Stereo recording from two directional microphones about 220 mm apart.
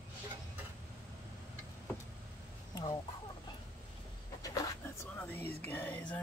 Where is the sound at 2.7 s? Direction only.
15° left (ahead or behind).